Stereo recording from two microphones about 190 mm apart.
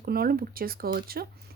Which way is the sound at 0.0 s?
50° right (ahead or behind).